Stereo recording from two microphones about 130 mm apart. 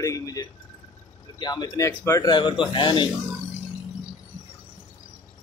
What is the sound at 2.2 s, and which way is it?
Speech, 35° left (ahead or behind).